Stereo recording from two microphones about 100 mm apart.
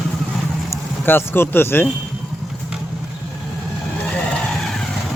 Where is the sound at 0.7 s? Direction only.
25° left (ahead or behind).